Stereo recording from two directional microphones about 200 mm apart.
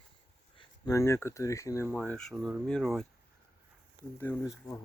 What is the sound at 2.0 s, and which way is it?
Speech, 5° left (ahead or behind).